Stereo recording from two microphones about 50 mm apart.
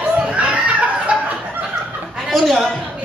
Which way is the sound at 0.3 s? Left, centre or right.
Right.